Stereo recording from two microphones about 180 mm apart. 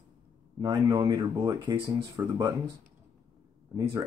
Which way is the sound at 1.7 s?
30° right (ahead or behind).